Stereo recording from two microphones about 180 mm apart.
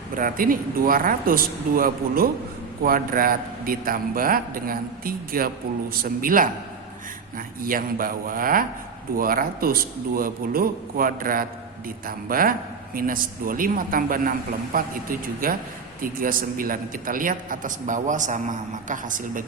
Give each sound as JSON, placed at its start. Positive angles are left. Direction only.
{"t": 0.2, "sound": "a man's voice", "side_deg": -50}